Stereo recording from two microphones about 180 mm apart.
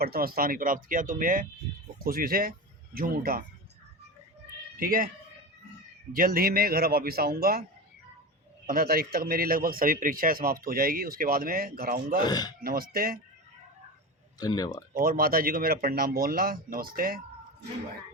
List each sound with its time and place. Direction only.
0.0 s a man's voice: 55° right (ahead or behind)
4.8 s a man's voice: 50° right (ahead or behind)
6.1 s speech: 50° right (ahead or behind)
8.6 s a man's voice: 55° right (ahead or behind)
12.2 s speech: 20° left (ahead or behind)
12.5 s speech: 55° right (ahead or behind)
14.3 s speech: 20° left (ahead or behind)
14.9 s speech: 55° right (ahead or behind)